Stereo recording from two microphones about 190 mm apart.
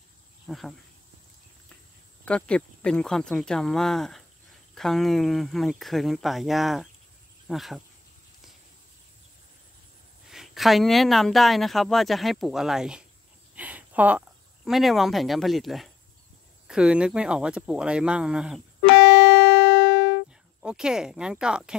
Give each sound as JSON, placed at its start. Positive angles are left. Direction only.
{"t": 0.5, "sound": "speech", "side_deg": 0}
{"t": 2.2, "sound": "speech", "side_deg": 5}
{"t": 10.3, "sound": "speech", "side_deg": 0}
{"t": 18.9, "sound": "music", "side_deg": 60}
{"t": 20.6, "sound": "speech", "side_deg": -5}